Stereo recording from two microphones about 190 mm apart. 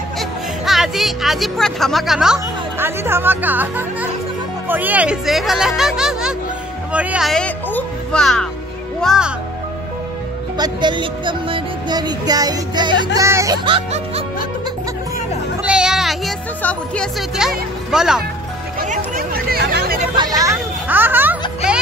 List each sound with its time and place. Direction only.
0.2 s speech: centre (ahead or behind)
10.6 s speech: 25° right (ahead or behind)
13.7 s music: 30° right (ahead or behind)
15.6 s speech: 5° right (ahead or behind)
18.8 s chatter: 50° right (ahead or behind)
20.2 s a child's voice: 20° right (ahead or behind)